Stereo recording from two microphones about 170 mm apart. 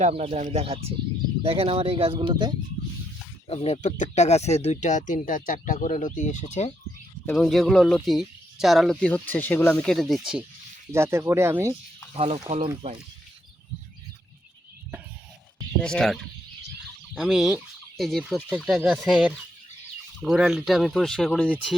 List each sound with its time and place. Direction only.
0.0 s speech: 35° right (ahead or behind)
3.5 s speech: 40° left (ahead or behind)
7.3 s speech: centre (ahead or behind)
10.9 s speech: 15° right (ahead or behind)
12.1 s speech: 35° right (ahead or behind)
15.8 s speech: 5° left (ahead or behind)
17.2 s speech: 5° right (ahead or behind)